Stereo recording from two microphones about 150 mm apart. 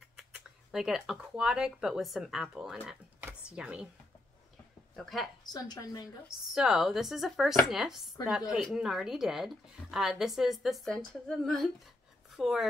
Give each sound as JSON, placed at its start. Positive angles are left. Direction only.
{"t": 0.2, "sound": "speech", "side_deg": -5}
{"t": 3.3, "sound": "a sound", "side_deg": -10}
{"t": 4.9, "sound": "speech", "side_deg": 0}
{"t": 5.5, "sound": "a woman's voice", "side_deg": 30}
{"t": 6.2, "sound": "speech", "side_deg": -5}